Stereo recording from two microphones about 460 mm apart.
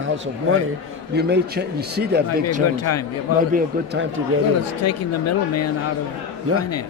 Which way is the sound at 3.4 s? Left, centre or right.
Centre.